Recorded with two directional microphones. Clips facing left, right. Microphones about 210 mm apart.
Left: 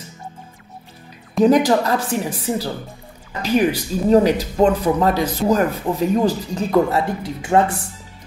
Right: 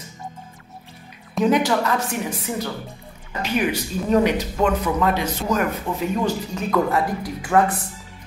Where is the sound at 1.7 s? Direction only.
35° left (ahead or behind).